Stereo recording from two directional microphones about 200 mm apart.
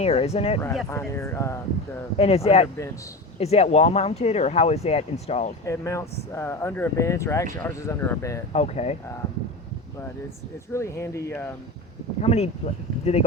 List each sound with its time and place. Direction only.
0.0 s speech: 30° left (ahead or behind)
0.9 s speech: 15° left (ahead or behind)
2.1 s speech: 30° left (ahead or behind)
5.6 s speech: 15° left (ahead or behind)
8.5 s speech: 35° left (ahead or behind)
10.7 s speech: 15° left (ahead or behind)
12.2 s speech: 30° left (ahead or behind)